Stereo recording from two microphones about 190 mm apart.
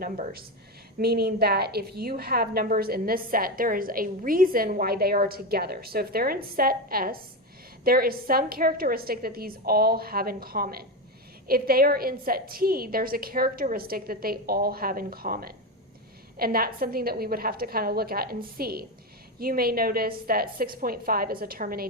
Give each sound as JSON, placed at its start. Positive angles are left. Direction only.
{"t": 0.0, "sound": "a woman's voice", "side_deg": -50}